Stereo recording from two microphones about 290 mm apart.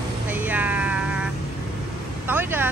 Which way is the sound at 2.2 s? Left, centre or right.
Centre.